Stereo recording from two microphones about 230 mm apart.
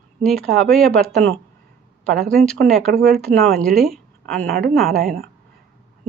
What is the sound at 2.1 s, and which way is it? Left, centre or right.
A woman's voice, centre.